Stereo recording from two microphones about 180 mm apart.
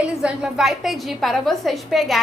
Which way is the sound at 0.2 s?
5° right (ahead or behind).